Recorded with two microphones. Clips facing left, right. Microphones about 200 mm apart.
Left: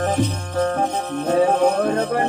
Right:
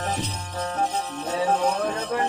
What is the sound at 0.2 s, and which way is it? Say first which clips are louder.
Music: left 10 dB; 50° left (ahead or behind).